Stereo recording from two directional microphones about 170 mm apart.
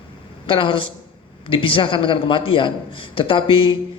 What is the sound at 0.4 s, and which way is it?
A man's voice, 30° left (ahead or behind).